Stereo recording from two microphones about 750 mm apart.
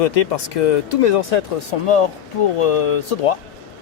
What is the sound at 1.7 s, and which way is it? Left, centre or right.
Speech, left.